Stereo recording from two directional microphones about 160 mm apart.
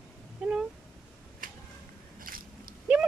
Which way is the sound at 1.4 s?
60° right (ahead or behind).